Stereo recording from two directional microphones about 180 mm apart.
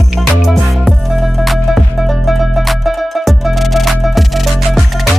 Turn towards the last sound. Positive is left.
turn(degrees=0)  # may be behind; listen again after turning